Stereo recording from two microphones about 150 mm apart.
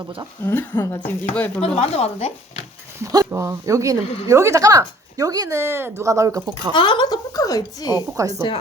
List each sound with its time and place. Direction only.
0.4 s speech: 15° left (ahead or behind)
1.6 s speech: 45° left (ahead or behind)
3.0 s a woman's voice: 20° right (ahead or behind)
4.0 s a woman's voice: 40° left (ahead or behind)
4.3 s a woman's voice: 20° right (ahead or behind)
6.7 s a woman's voice: 30° left (ahead or behind)
8.1 s a woman's voice: 20° right (ahead or behind)